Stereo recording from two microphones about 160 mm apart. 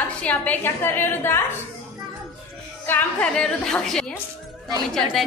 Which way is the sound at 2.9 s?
10° left (ahead or behind).